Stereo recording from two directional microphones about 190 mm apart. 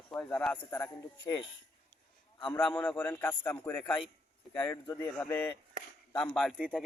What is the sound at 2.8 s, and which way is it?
Speech, 10° left (ahead or behind).